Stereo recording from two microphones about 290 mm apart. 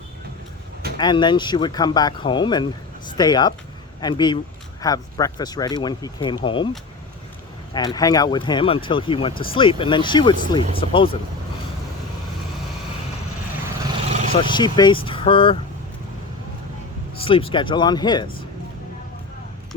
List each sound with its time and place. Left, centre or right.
0.9 s speech: centre
7.7 s speech: centre
14.1 s roaring cats: right
14.4 s speech: centre
17.2 s speech: centre